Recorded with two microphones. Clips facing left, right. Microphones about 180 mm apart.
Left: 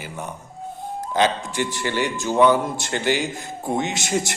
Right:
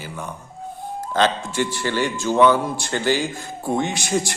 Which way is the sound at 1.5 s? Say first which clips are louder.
Right 1 dB; 15° left (ahead or behind).